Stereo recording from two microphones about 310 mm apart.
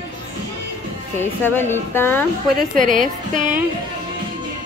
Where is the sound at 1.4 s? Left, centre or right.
Centre.